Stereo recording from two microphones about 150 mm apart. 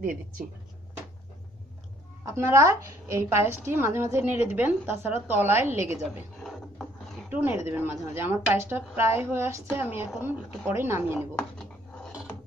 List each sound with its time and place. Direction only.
0.0 s speech: 65° right (ahead or behind)
2.2 s a woman's voice: 20° right (ahead or behind)
6.4 s wood: centre (ahead or behind)
7.2 s a woman's voice: 10° right (ahead or behind)
11.3 s a sound: 5° left (ahead or behind)